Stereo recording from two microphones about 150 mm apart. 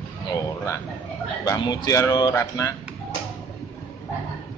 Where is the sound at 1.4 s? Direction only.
25° left (ahead or behind).